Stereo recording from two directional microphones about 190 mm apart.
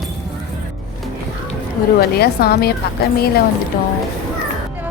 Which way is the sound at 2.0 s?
55° left (ahead or behind).